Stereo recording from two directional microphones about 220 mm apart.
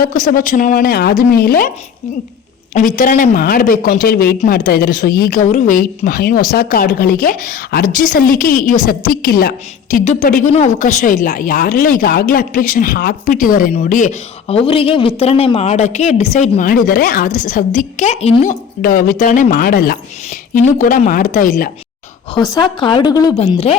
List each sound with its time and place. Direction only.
0.0 s speech: 40° left (ahead or behind)
2.7 s speech: 35° left (ahead or behind)
18.8 s speech: 40° left (ahead or behind)
22.4 s speech: 20° left (ahead or behind)